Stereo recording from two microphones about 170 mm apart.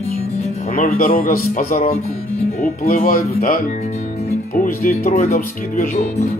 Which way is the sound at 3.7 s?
40° left (ahead or behind).